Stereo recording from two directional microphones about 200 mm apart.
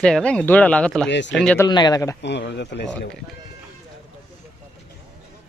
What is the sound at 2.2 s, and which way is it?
Speech, 60° left (ahead or behind).